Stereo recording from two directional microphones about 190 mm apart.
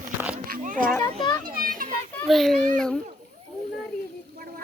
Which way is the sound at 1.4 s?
50° right (ahead or behind).